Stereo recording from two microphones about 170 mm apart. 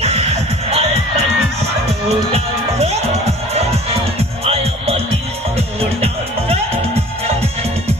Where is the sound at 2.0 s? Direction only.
40° right (ahead or behind).